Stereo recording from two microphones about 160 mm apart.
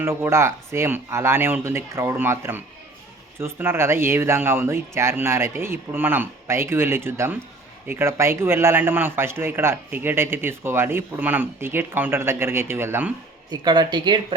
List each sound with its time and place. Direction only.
0.0 s a man's voice: 15° right (ahead or behind)
13.5 s speech: 25° right (ahead or behind)